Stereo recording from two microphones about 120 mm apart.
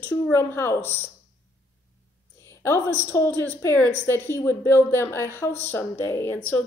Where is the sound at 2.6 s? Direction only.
20° left (ahead or behind).